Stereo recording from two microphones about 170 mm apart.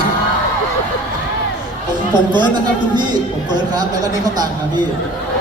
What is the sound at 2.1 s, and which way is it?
Speech, 25° right (ahead or behind).